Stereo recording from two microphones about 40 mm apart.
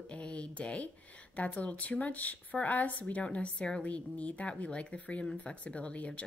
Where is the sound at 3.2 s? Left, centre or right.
Left.